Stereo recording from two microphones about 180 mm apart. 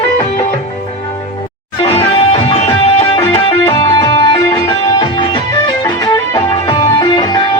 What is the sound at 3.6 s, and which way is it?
Music, 20° left (ahead or behind).